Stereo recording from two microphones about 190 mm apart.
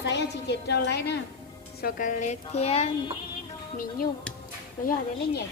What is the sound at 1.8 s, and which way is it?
A woman's voice, 45° left (ahead or behind).